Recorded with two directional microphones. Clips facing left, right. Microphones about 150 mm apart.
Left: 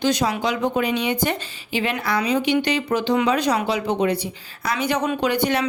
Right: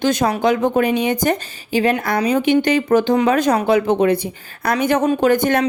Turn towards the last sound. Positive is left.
turn(degrees=-50)  # may be behind; listen again after turning